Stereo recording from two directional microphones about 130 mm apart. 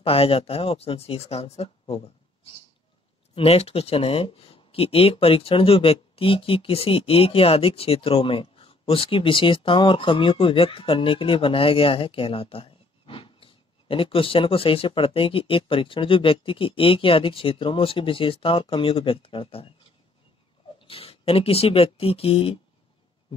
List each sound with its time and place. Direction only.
0.0 s speech: 45° left (ahead or behind)
3.3 s speech: 50° left (ahead or behind)
20.8 s speech: 45° left (ahead or behind)